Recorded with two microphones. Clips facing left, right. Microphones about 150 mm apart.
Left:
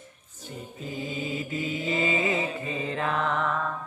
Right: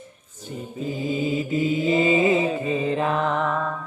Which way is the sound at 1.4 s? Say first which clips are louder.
Right 8 dB; 25° right (ahead or behind).